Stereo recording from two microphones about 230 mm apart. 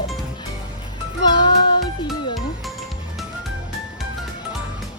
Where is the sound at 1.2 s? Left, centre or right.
Centre.